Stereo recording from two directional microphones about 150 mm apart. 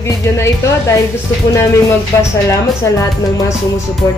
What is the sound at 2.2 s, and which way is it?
Speech, 20° left (ahead or behind).